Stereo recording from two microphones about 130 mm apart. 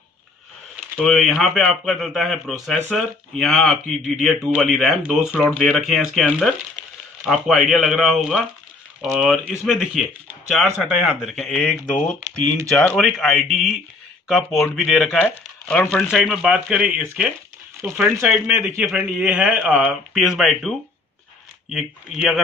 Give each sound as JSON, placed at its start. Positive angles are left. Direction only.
{"t": 0.9, "sound": "speech", "side_deg": 5}
{"t": 9.7, "sound": "speech", "side_deg": 0}
{"t": 16.1, "sound": "speech", "side_deg": 0}
{"t": 18.5, "sound": "a man's voice", "side_deg": -20}
{"t": 18.9, "sound": "speech", "side_deg": -5}
{"t": 21.7, "sound": "speech", "side_deg": 0}